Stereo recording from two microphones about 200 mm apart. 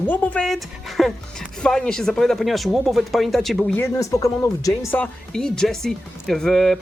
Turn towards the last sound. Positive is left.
turn(degrees=0)  # may be behind; listen again after turning